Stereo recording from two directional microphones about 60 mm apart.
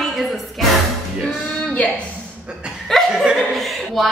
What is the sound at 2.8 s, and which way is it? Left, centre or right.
Chuckle, centre.